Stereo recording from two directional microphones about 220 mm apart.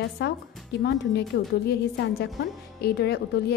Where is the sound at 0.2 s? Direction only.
50° left (ahead or behind).